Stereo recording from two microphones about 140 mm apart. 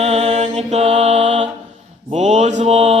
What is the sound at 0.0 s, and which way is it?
Mantra, 50° right (ahead or behind).